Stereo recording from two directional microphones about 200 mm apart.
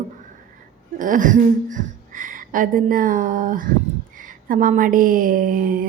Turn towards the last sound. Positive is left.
turn(degrees=-45)  # may be behind; listen again after turning